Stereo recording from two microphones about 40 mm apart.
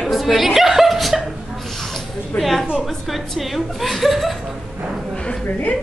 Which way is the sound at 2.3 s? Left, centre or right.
Left.